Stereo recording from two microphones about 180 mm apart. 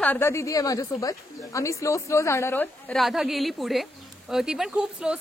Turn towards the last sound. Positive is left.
turn(degrees=-5)  # may be behind; listen again after turning